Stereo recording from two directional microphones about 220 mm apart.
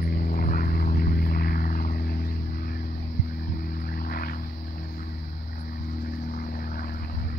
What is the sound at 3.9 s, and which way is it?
Vehicle, 40° left (ahead or behind).